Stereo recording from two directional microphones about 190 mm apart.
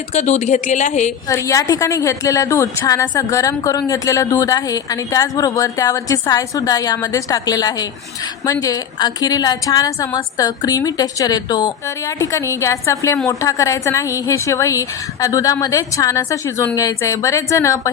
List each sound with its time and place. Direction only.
0.1 s speech: 35° left (ahead or behind)
1.3 s a woman's voice: 15° left (ahead or behind)